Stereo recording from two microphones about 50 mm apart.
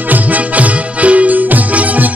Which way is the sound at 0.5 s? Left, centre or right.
Right.